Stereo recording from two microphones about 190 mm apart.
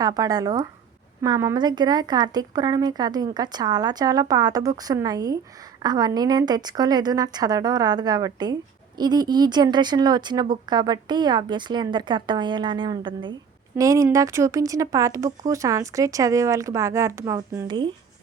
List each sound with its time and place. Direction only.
0.0 s speech: 20° right (ahead or behind)